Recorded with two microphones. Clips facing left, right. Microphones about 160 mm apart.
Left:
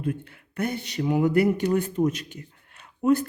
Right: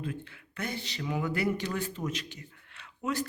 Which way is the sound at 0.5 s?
55° left (ahead or behind).